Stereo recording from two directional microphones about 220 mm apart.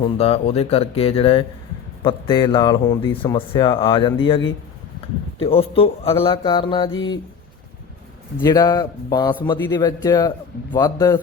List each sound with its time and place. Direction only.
0.2 s speech: 25° left (ahead or behind)
8.4 s a man's voice: 20° left (ahead or behind)